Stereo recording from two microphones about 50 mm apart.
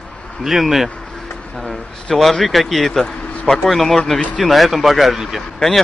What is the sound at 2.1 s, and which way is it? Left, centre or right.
A man's voice, centre.